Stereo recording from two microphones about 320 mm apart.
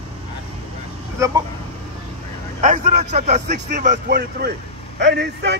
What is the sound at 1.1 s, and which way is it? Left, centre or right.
Speech, centre.